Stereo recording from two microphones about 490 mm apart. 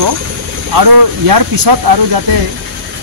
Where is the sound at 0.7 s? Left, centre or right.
Right.